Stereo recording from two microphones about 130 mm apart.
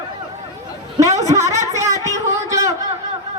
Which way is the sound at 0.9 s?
25° right (ahead or behind).